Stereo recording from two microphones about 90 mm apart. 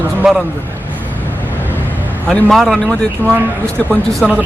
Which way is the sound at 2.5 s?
5° left (ahead or behind).